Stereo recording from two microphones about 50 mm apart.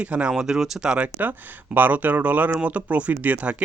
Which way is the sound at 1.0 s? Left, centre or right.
Right.